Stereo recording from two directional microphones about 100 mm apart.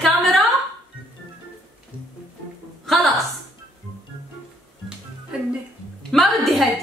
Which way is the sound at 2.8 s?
Centre (ahead or behind).